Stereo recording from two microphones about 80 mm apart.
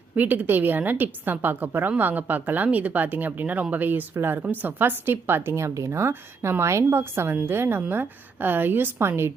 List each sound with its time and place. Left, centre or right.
0.2 s a woman's voice: right